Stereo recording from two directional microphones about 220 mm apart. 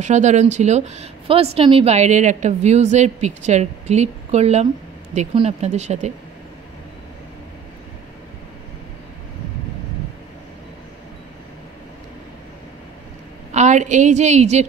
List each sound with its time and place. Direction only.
0.0 s speech: 30° right (ahead or behind)
13.5 s speech: 30° right (ahead or behind)